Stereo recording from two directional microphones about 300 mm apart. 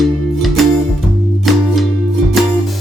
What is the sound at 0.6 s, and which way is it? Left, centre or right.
Music, centre.